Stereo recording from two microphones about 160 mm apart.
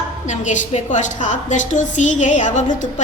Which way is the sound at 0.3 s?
50° left (ahead or behind).